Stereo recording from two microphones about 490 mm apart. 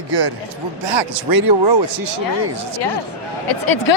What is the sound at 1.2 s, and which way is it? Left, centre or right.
Speech, right.